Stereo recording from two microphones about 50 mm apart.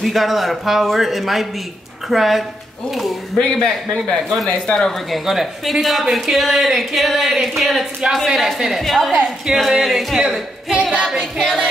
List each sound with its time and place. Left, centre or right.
0.0 s speech: centre
3.3 s a man's voice: centre
5.1 s speech: centre
8.5 s music: centre
8.8 s speech: centre
11.1 s music: centre